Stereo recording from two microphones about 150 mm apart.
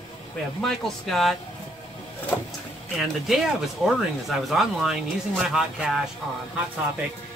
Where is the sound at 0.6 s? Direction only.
Centre (ahead or behind).